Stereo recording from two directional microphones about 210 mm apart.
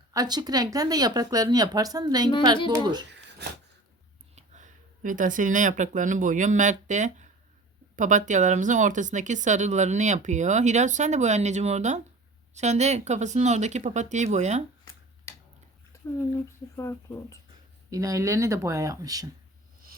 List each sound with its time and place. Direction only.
0.1 s speech: 20° right (ahead or behind)
4.4 s speech: 35° right (ahead or behind)
16.5 s speech: 15° left (ahead or behind)
17.9 s speech: 15° right (ahead or behind)